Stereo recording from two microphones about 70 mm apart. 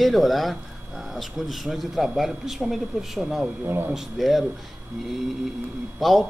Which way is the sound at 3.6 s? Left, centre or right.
Right.